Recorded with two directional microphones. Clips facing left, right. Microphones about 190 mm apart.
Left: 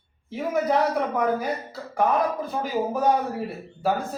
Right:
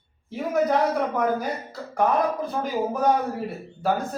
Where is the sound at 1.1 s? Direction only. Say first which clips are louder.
Even; 5° left (ahead or behind).